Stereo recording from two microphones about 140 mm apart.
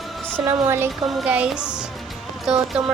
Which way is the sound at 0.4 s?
25° right (ahead or behind).